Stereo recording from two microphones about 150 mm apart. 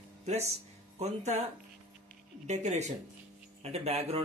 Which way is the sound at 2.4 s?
50° right (ahead or behind).